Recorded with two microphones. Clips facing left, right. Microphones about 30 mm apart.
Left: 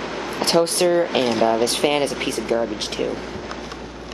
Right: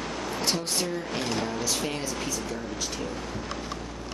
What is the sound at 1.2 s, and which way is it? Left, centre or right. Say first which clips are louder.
Speech: left 11 dB; left.